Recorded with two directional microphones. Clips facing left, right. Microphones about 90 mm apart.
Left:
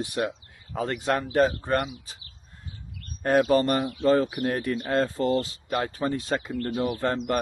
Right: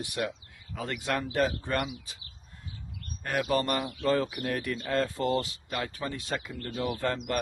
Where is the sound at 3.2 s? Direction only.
30° left (ahead or behind).